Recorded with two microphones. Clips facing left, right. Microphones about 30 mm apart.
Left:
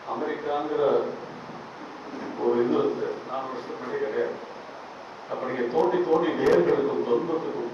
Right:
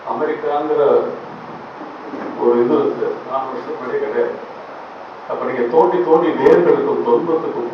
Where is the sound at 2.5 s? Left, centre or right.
Right.